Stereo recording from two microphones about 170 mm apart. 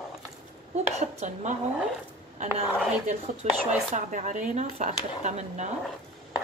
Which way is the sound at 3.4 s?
45° right (ahead or behind).